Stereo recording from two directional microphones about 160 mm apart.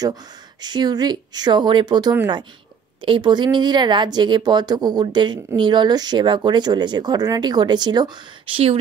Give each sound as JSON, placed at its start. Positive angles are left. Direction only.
{"t": 0.0, "sound": "speech", "side_deg": -25}